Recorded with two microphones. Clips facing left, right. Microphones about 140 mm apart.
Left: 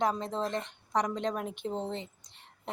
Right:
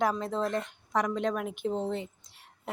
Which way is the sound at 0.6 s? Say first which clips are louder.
Right 1 dB; centre (ahead or behind).